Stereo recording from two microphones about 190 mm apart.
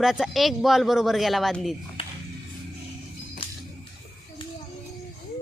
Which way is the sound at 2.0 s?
30° left (ahead or behind).